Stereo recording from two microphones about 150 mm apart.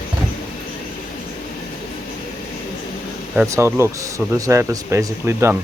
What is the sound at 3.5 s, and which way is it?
Speech, 20° right (ahead or behind).